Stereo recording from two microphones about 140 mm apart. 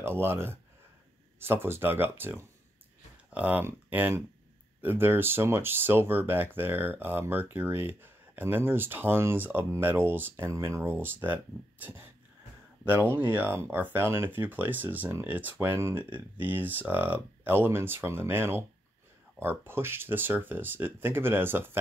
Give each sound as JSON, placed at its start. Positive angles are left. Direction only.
{"t": 0.0, "sound": "speech", "side_deg": -15}
{"t": 13.3, "sound": "speech", "side_deg": -15}